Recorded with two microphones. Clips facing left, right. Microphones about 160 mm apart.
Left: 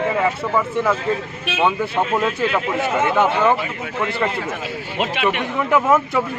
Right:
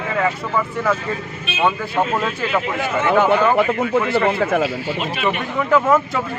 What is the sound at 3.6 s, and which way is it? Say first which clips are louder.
Speech: right 10 dB; 65° right (ahead or behind).